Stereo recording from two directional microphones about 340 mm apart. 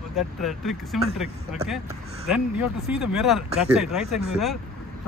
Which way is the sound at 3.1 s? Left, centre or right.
Centre.